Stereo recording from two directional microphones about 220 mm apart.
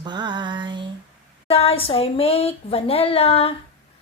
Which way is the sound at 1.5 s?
25° left (ahead or behind).